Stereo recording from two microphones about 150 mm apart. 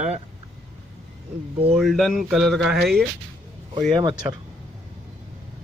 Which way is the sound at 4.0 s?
25° right (ahead or behind).